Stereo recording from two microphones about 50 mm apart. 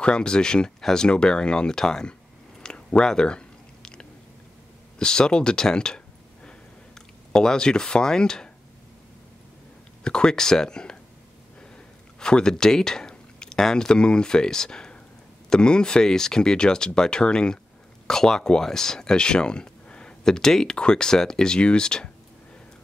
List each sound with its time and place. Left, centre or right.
0.0 s speech: centre
2.6 s chewing: centre
4.9 s speech: centre
7.3 s speech: centre
10.0 s speech: centre
12.2 s speech: centre